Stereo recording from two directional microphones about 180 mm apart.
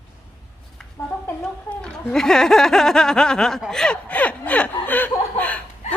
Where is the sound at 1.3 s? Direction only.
10° left (ahead or behind).